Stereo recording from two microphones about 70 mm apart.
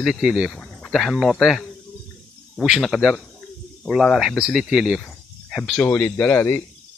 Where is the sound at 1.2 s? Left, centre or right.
Centre.